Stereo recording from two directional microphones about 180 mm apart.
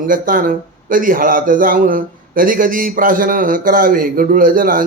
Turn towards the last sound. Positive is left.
turn(degrees=-50)  # may be behind; listen again after turning